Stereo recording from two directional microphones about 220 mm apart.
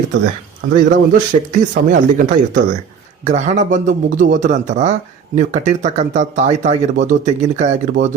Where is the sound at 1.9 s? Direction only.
35° right (ahead or behind).